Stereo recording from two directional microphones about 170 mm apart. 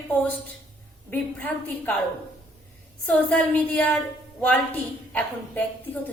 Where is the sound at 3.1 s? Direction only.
5° left (ahead or behind).